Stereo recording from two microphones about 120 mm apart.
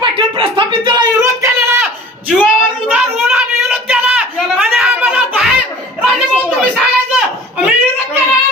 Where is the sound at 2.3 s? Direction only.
5° right (ahead or behind).